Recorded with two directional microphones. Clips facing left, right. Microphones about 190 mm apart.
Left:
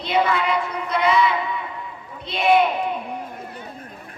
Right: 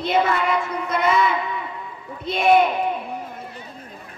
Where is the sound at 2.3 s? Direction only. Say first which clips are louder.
Right 3 dB; 45° right (ahead or behind).